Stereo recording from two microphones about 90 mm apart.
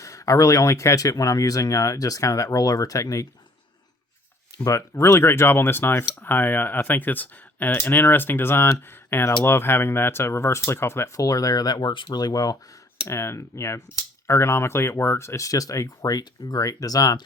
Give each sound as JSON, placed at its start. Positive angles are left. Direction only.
{"t": 0.0, "sound": "speech", "side_deg": 35}
{"t": 4.5, "sound": "speech", "side_deg": 35}
{"t": 13.1, "sound": "speech", "side_deg": 30}